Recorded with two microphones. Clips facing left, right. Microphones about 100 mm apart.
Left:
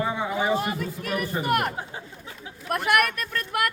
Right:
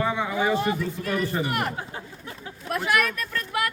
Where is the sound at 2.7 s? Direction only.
60° left (ahead or behind).